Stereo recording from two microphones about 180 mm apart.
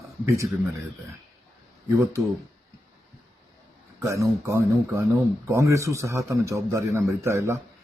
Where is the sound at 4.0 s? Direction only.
15° right (ahead or behind).